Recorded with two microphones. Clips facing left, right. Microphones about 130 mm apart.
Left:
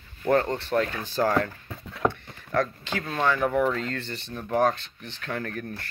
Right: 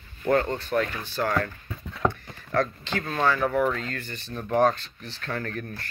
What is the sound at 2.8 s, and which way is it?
Speech, 10° left (ahead or behind).